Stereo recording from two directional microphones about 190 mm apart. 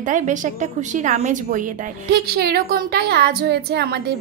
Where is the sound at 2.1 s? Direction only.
55° right (ahead or behind).